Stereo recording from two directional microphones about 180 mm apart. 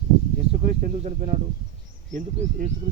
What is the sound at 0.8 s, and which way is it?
Speech, 45° right (ahead or behind).